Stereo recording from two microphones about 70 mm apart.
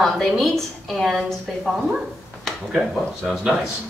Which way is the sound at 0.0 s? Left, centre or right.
Centre.